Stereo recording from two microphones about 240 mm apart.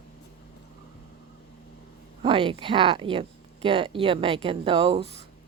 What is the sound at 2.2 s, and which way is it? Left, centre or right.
Speech, right.